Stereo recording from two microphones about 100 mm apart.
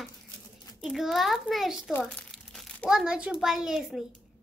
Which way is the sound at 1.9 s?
15° left (ahead or behind).